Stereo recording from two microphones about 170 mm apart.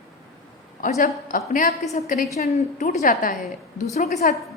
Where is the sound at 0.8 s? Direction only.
50° left (ahead or behind).